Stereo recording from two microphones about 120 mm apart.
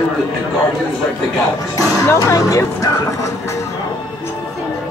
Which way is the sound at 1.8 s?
30° left (ahead or behind).